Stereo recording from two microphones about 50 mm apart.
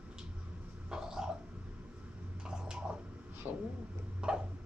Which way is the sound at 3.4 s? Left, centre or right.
Right.